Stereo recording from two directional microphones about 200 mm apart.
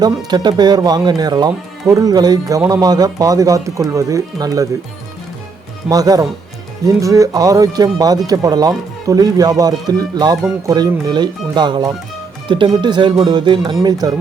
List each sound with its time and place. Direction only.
0.3 s speech: 20° right (ahead or behind)
5.9 s speech: 20° right (ahead or behind)